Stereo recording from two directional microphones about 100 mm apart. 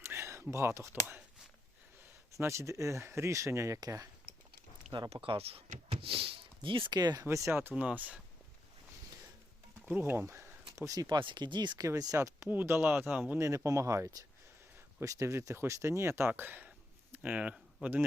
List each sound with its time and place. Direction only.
0.0 s a sound: 25° right (ahead or behind)
0.5 s speech: 30° right (ahead or behind)
2.3 s speech: 30° right (ahead or behind)
5.2 s speech: 70° right (ahead or behind); by 7.3 s 45° right (ahead or behind)
7.3 s speech: 30° right (ahead or behind); by 8.2 s 15° right (ahead or behind)
9.8 s speech: 20° right (ahead or behind)
11.0 s speech: 50° right (ahead or behind)
11.9 s speech: 35° right (ahead or behind)
12.5 s speech: 20° right (ahead or behind)
13.4 s speech: 30° right (ahead or behind); by 17.6 s 10° right (ahead or behind)